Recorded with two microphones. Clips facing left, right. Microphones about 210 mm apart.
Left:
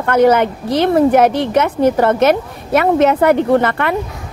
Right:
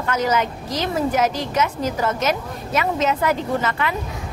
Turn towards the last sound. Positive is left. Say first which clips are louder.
# left 9 dB
turn(degrees=60)  # may be behind; listen again after turning